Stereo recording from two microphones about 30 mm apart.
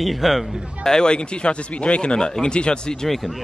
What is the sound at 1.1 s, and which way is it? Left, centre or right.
Speech, left.